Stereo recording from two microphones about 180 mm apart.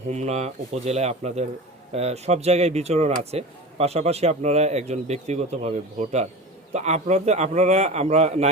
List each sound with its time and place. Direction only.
0.1 s a man's voice: 40° right (ahead or behind)